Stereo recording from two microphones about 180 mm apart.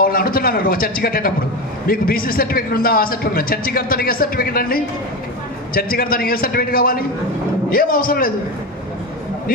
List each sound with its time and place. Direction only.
0.0 s a man's voice: 55° left (ahead or behind)